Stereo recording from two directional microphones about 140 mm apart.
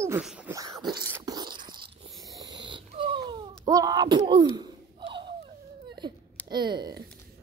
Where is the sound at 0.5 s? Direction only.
25° right (ahead or behind).